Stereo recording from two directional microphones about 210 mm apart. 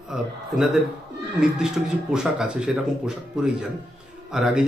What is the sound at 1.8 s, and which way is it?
A man's voice, centre (ahead or behind).